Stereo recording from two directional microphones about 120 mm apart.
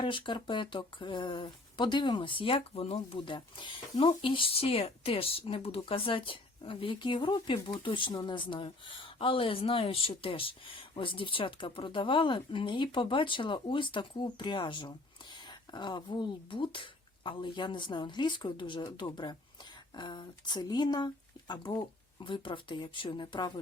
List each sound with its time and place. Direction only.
0.0 s speech: 45° left (ahead or behind)